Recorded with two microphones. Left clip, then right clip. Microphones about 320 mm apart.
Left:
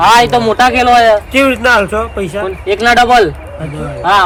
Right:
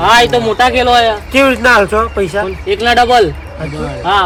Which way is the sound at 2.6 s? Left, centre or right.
Centre.